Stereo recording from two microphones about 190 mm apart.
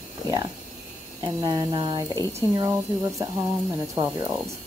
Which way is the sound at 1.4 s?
20° right (ahead or behind).